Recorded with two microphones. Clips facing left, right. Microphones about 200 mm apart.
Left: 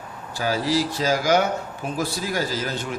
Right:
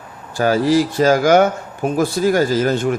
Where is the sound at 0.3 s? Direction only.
55° right (ahead or behind).